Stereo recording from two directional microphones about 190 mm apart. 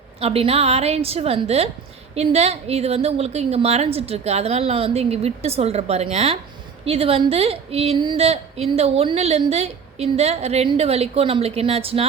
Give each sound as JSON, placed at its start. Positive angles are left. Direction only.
{"t": 0.2, "sound": "a woman's voice", "side_deg": -30}